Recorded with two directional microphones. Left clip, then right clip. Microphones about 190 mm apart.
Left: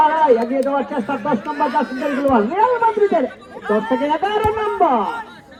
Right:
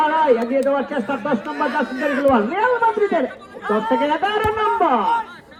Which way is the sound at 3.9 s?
15° left (ahead or behind).